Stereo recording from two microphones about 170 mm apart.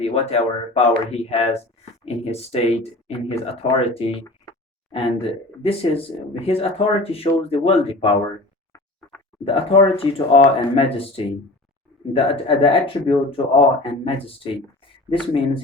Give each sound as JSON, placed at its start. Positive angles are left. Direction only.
{"t": 0.0, "sound": "speech", "side_deg": 35}
{"t": 9.4, "sound": "speech", "side_deg": 30}